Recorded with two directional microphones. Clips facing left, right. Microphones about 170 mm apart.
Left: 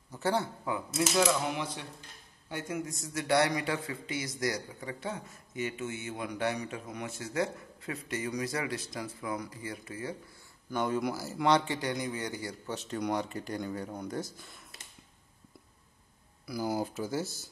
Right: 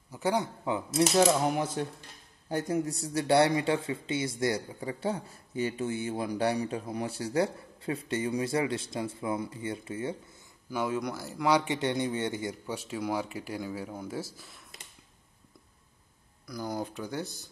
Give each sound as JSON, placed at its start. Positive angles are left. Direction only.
{"t": 0.1, "sound": "speech", "side_deg": -15}
{"t": 1.1, "sound": "cutlery", "side_deg": -40}
{"t": 2.5, "sound": "a man's voice", "side_deg": -35}
{"t": 10.7, "sound": "speech", "side_deg": -5}
{"t": 11.5, "sound": "a man's voice", "side_deg": -20}
{"t": 12.6, "sound": "speech", "side_deg": -10}
{"t": 16.4, "sound": "speech", "side_deg": 5}